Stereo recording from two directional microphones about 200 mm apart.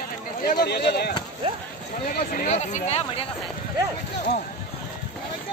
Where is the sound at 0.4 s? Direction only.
50° left (ahead or behind); by 3.3 s 30° left (ahead or behind).